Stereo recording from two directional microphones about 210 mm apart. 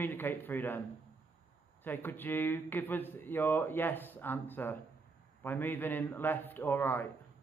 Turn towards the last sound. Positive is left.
turn(degrees=10)  # may be behind; listen again after turning